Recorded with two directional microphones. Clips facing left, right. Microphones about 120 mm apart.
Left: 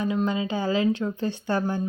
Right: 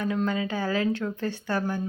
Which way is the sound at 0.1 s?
20° left (ahead or behind).